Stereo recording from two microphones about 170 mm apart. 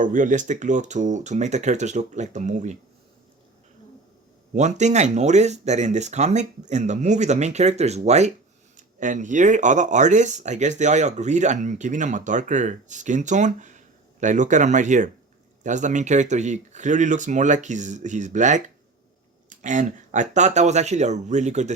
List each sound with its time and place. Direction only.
0.0 s speech: 50° right (ahead or behind)
4.5 s speech: 45° right (ahead or behind)